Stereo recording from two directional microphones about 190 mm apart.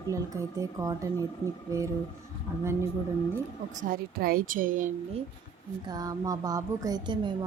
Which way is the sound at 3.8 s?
50° right (ahead or behind).